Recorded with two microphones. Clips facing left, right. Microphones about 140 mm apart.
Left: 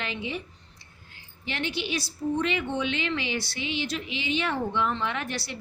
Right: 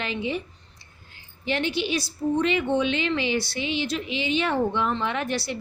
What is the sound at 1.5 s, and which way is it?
A woman's voice, 30° right (ahead or behind).